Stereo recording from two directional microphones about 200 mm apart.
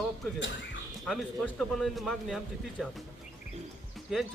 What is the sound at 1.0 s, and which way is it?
Speech, centre (ahead or behind).